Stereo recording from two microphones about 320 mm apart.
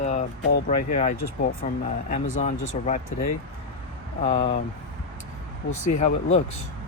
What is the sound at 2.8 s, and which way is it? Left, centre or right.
Speech, left.